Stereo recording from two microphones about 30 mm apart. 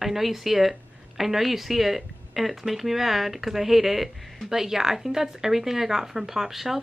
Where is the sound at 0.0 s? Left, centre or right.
Centre.